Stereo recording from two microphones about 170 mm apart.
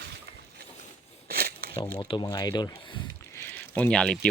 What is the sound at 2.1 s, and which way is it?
Speech, 25° left (ahead or behind).